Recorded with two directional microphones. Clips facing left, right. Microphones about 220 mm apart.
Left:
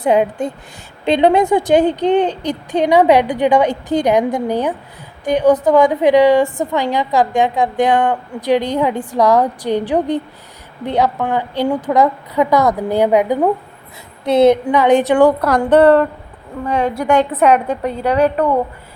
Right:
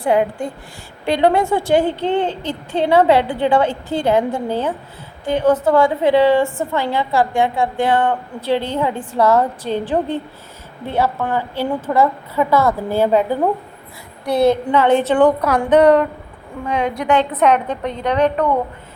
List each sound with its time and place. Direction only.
0.0 s a woman's voice: 20° left (ahead or behind)
15.4 s a woman's voice: 10° right (ahead or behind)
16.6 s a woman's voice: 5° left (ahead or behind)